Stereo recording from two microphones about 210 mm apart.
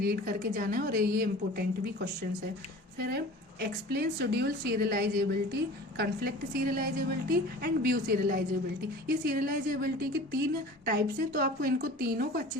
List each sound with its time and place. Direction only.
0.0 s a woman's voice: 45° right (ahead or behind)